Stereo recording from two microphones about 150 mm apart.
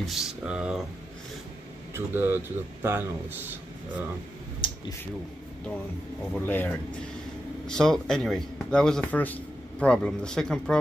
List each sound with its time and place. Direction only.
0.0 s speech: centre (ahead or behind)
2.0 s speech: 15° right (ahead or behind)
4.6 s a sound: 35° left (ahead or behind)
6.3 s speech: 10° left (ahead or behind)